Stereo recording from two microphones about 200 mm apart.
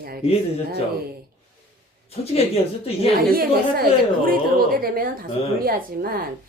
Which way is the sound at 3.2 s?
45° right (ahead or behind).